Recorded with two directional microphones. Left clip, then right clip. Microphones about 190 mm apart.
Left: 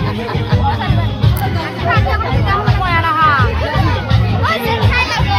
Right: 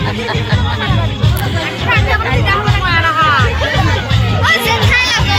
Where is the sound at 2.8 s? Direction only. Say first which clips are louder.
Even; 35° left (ahead or behind).